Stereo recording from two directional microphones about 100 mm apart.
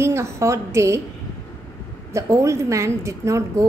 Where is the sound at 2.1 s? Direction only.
30° right (ahead or behind).